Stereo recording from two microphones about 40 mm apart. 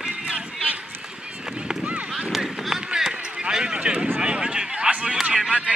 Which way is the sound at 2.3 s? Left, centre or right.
Centre.